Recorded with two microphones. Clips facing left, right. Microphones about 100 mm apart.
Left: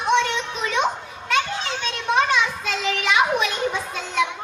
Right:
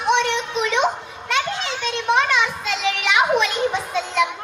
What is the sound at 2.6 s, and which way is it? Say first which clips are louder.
Children playing: right 1 dB; 20° right (ahead or behind).